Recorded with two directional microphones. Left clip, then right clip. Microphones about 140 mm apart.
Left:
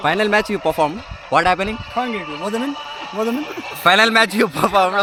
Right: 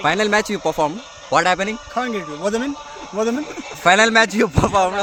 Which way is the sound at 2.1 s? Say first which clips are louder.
Left 1 dB; 35° left (ahead or behind).